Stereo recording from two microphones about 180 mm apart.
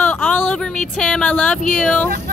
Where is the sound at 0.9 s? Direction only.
5° left (ahead or behind).